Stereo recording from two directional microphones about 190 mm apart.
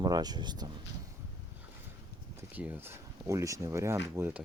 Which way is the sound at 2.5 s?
10° right (ahead or behind).